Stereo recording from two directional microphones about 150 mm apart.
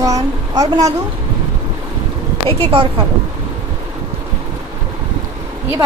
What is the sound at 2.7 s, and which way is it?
Speech, 40° right (ahead or behind).